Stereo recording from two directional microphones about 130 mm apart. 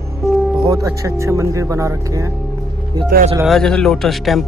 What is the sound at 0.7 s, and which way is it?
Speech, 25° right (ahead or behind).